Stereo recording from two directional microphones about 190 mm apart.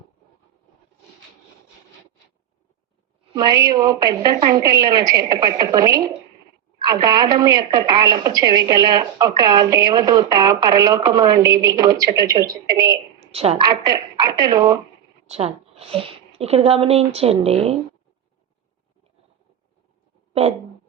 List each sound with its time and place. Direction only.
3.3 s a woman's voice: 20° right (ahead or behind)
13.1 s a sound: 30° right (ahead or behind)
13.6 s a woman's voice: 20° right (ahead or behind)
15.3 s speech: 35° right (ahead or behind)